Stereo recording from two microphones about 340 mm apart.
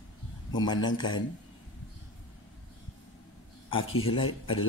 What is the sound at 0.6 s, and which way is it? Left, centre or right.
Speech, centre.